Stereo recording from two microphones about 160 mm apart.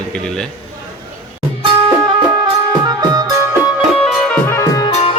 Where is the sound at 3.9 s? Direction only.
5° left (ahead or behind).